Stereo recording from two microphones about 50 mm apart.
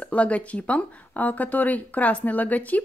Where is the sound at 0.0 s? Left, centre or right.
Left.